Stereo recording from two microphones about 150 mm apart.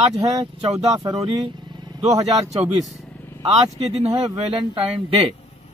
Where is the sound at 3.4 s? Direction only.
45° right (ahead or behind).